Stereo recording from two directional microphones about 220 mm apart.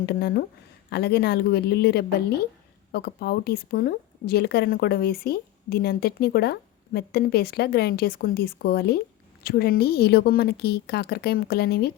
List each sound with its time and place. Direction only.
0.0 s speech: 45° left (ahead or behind)